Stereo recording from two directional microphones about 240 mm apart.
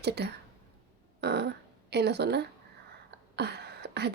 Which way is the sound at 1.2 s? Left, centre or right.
Right.